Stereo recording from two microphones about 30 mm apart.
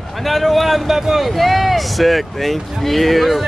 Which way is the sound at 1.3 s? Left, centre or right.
Centre.